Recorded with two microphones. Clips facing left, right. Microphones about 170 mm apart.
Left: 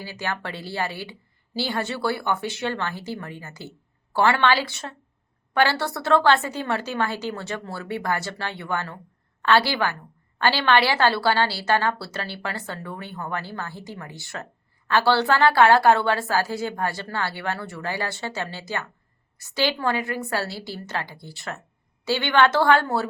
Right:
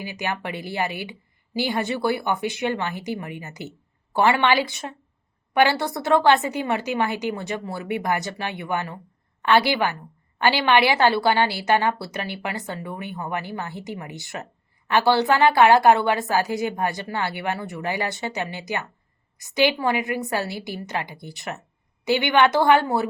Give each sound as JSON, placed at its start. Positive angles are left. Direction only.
{"t": 0.0, "sound": "a woman's voice", "side_deg": -15}